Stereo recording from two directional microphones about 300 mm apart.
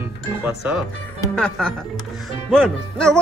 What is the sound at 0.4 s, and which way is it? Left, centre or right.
Speech, centre.